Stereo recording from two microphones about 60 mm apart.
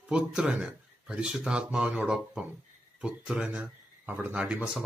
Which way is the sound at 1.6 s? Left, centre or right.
Right.